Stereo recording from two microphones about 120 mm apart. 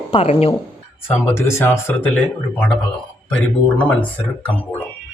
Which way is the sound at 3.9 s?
10° left (ahead or behind).